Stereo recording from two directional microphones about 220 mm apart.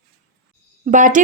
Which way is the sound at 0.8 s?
35° right (ahead or behind).